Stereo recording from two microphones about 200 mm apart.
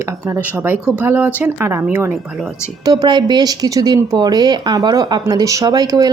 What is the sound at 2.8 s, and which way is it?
Speech, 20° right (ahead or behind).